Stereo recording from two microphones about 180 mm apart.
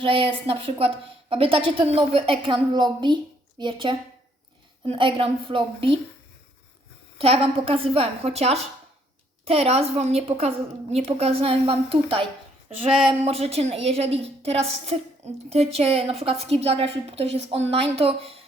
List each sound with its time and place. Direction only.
0.0 s a woman's voice: 30° right (ahead or behind)
7.2 s a woman's voice: 30° right (ahead or behind)